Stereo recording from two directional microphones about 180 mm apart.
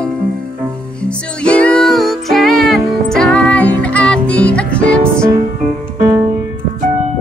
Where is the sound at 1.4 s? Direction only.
5° left (ahead or behind).